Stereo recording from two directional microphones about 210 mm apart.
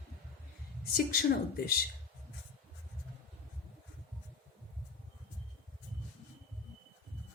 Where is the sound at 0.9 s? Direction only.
45° left (ahead or behind).